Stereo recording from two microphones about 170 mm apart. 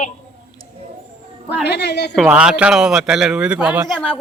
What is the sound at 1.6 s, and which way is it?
Speech, 80° left.